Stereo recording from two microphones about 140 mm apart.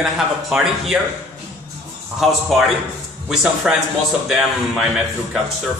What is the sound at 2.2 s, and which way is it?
Speech, centre (ahead or behind).